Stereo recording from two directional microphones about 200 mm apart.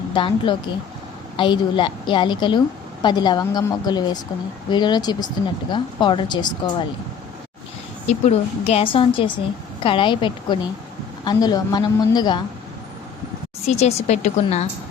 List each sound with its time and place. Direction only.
0.1 s a woman's voice: 25° left (ahead or behind)
8.0 s a woman's voice: 35° left (ahead or behind)
13.7 s a woman's voice: 35° left (ahead or behind)